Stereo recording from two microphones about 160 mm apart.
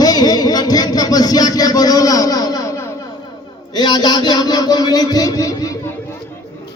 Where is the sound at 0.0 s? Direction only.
25° left (ahead or behind).